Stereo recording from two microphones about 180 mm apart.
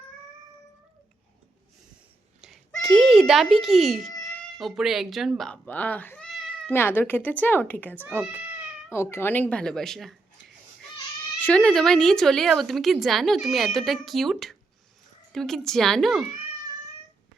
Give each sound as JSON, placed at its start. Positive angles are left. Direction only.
{"t": 2.4, "sound": "a sound", "side_deg": 0}
{"t": 4.0, "sound": "cat", "side_deg": 20}
{"t": 4.5, "sound": "speech", "side_deg": 0}
{"t": 6.7, "sound": "speech", "side_deg": 10}
{"t": 8.0, "sound": "speech", "side_deg": -10}
{"t": 8.9, "sound": "speech", "side_deg": 15}
{"t": 11.3, "sound": "speech", "side_deg": 5}